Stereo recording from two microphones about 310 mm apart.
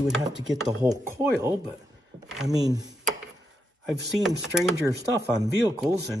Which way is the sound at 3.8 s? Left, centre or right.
Centre.